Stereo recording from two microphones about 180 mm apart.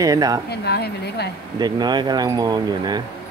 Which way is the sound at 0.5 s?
65° left (ahead or behind).